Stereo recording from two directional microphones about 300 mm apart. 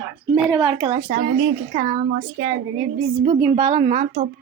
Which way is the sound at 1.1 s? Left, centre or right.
Right.